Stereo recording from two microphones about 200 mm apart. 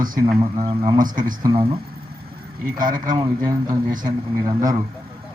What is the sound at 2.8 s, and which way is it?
Speech, 40° right (ahead or behind).